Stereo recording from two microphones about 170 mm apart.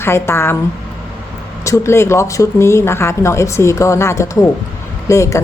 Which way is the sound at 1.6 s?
15° left (ahead or behind).